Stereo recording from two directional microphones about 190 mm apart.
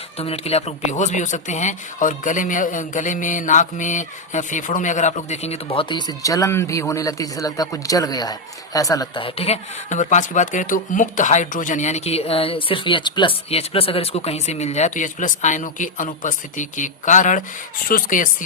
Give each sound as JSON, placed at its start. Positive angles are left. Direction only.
{"t": 0.2, "sound": "speech", "side_deg": 30}